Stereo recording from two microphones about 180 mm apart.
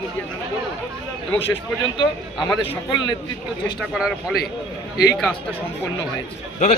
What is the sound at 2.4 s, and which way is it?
Speech, 30° left (ahead or behind).